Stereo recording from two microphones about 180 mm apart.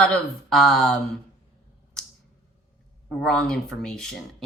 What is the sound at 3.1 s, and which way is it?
Speech, 5° left (ahead or behind).